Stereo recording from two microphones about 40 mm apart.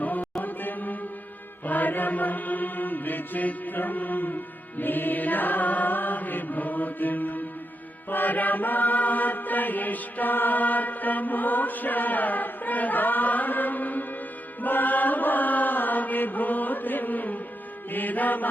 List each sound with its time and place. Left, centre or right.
0.0 s chant: left
1.6 s mantra: left
14.6 s chant: left
17.9 s mantra: left